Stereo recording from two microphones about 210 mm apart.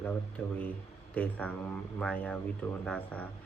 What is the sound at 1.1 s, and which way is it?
Speech, 5° left (ahead or behind).